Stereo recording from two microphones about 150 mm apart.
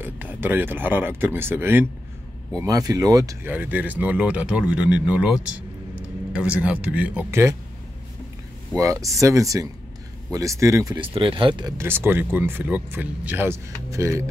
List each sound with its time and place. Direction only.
0.0 s speech: 15° right (ahead or behind)
3.4 s speech: 10° right (ahead or behind)
8.7 s speech: 20° right (ahead or behind)
11.0 s speech: 35° right (ahead or behind)
11.8 s speech: 15° right (ahead or behind)